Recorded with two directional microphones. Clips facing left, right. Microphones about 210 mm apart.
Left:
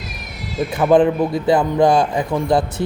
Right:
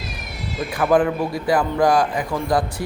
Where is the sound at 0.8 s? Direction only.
20° left (ahead or behind).